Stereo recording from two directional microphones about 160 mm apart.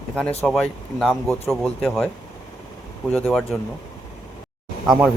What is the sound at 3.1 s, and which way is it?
Speech, 5° left (ahead or behind).